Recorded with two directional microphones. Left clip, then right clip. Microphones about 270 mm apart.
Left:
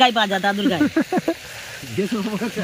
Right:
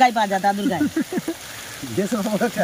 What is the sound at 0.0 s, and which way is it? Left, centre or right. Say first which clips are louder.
Speech: even; centre.